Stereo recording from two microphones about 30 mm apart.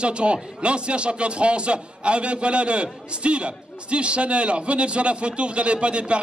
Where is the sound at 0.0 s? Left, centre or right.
Right.